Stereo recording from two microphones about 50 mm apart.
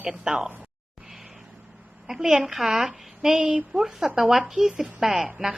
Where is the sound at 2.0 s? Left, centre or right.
Centre.